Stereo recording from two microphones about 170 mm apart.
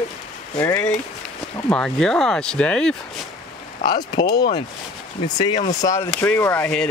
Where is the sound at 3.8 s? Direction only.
25° left (ahead or behind).